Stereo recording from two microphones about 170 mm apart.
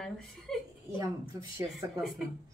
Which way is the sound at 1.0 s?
20° right (ahead or behind).